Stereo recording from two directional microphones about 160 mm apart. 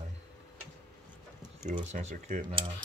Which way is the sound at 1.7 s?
45° right (ahead or behind).